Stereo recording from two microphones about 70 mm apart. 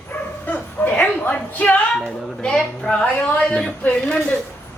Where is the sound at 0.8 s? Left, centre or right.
Left.